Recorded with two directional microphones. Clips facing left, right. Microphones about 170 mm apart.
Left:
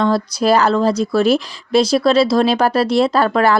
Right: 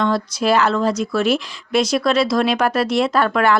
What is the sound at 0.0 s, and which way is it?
Speech, 35° left (ahead or behind).